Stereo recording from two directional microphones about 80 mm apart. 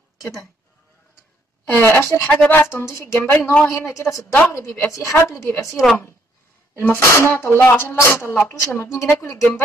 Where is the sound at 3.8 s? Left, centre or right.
Left.